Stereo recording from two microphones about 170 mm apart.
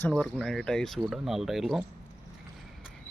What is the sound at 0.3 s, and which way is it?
Speech, centre (ahead or behind).